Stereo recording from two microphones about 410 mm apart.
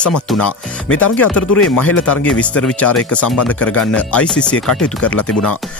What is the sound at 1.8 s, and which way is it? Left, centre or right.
Speech, left.